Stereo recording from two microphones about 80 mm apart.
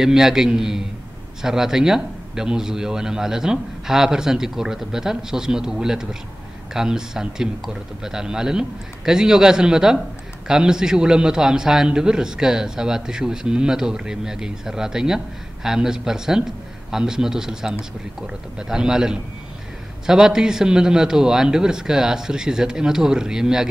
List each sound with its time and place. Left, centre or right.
0.0 s a man's voice: centre